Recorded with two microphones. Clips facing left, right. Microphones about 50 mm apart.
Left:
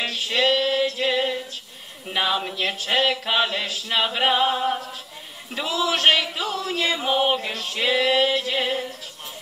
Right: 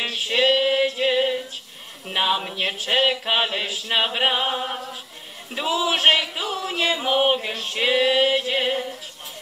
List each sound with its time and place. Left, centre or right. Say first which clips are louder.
0.0 s female singing: right 1 dB; centre
2.1 s speech: right 1 dB; centre
2.5 s male singing: even; centre
5.5 s a sound: right 1 dB; centre
7.2 s male singing: right 1 dB; centre